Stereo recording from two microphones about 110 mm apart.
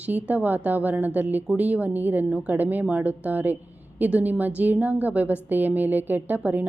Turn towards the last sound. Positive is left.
turn(degrees=-15)  # may be behind; listen again after turning